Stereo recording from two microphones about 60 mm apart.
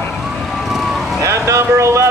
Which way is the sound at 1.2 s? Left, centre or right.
Right.